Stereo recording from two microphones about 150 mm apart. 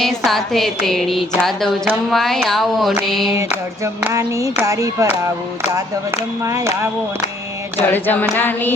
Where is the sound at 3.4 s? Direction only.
20° right (ahead or behind).